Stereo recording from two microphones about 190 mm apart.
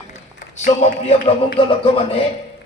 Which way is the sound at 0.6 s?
35° left (ahead or behind).